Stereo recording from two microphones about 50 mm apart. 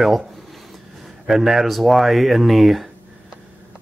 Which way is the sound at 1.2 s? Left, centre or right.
Centre.